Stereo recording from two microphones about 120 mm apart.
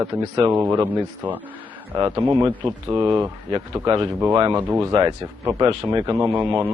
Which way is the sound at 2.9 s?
40° right (ahead or behind).